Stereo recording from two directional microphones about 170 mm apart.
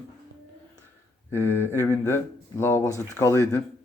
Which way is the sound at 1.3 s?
15° left (ahead or behind).